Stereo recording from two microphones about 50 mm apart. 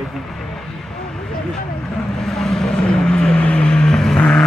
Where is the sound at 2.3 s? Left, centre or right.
Centre.